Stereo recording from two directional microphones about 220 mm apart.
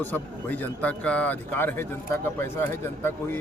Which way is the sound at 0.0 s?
10° left (ahead or behind).